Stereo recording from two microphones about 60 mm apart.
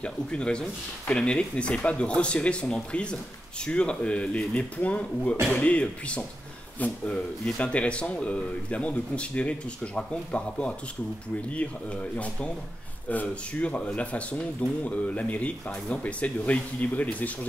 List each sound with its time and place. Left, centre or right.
0.0 s speech: centre